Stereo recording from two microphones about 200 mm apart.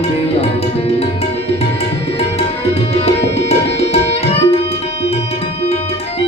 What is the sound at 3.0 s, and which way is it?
Tabla, 30° left (ahead or behind).